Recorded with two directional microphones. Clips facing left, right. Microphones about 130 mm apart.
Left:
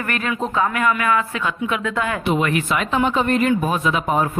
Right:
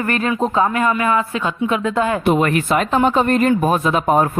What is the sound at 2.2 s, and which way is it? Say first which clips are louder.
Speech: right 4 dB; 45° right (ahead or behind).